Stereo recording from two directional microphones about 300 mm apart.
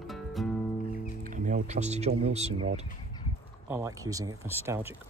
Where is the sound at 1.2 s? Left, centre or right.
Right.